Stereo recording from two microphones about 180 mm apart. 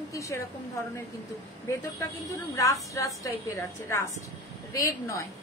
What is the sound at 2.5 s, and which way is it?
A woman's voice, 15° left (ahead or behind).